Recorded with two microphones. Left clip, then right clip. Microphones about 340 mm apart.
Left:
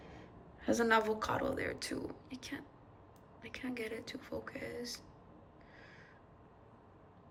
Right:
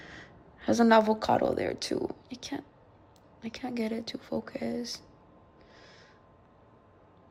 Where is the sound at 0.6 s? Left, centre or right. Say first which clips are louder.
Right 8 dB; centre.